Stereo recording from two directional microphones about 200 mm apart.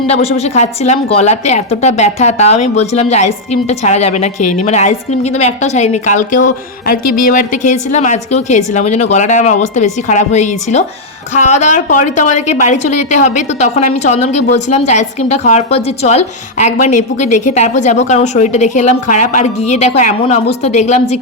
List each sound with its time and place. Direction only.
0.1 s a woman's voice: 30° left (ahead or behind)